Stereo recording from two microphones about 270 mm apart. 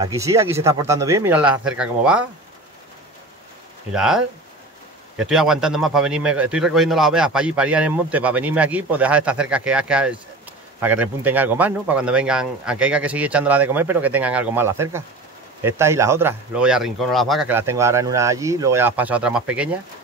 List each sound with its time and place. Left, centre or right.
0.0 s speech: centre
3.9 s a man's voice: centre